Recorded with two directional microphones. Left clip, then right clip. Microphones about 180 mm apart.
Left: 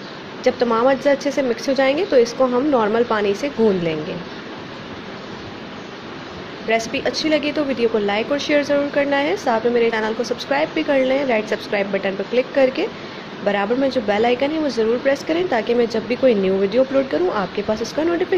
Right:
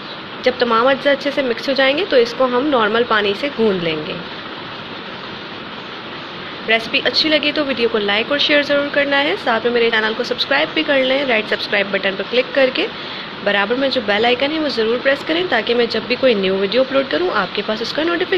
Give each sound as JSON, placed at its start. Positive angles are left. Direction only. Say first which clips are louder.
{"t": 0.4, "sound": "speech", "louder": "right 2 dB", "side_deg": 25}
{"t": 2.5, "sound": "speech", "louder": "right 2 dB", "side_deg": 10}
{"t": 6.9, "sound": "speech", "louder": "right 4 dB", "side_deg": 20}